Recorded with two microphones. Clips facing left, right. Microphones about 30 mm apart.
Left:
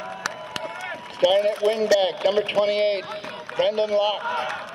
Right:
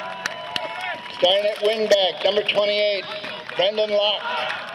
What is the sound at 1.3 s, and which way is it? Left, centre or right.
A man's voice, right.